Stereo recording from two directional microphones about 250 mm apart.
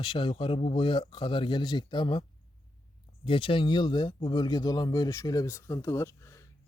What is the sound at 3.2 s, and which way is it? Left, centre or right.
A man's voice, left.